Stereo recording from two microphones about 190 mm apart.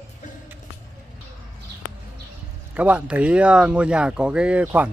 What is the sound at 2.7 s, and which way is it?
Speech, 5° right (ahead or behind).